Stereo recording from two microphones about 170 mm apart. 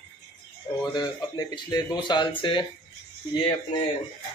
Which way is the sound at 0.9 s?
25° left (ahead or behind).